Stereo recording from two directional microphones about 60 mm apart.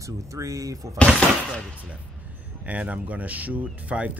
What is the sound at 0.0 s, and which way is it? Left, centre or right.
Speech, right.